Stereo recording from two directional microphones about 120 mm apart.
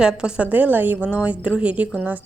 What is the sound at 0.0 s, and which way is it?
A woman's voice, 5° right (ahead or behind).